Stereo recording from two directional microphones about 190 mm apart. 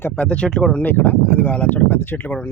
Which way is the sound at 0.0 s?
5° left (ahead or behind).